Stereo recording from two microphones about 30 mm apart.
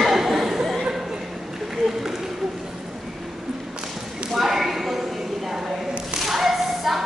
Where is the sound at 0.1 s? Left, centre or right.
Centre.